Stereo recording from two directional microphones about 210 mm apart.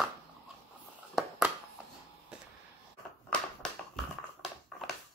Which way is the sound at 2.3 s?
5° right (ahead or behind).